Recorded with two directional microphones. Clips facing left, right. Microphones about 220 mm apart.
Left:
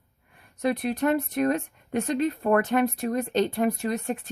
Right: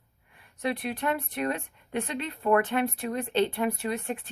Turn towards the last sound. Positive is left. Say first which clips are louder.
# left 3 dB
turn(degrees=40)  # may be behind; listen again after turning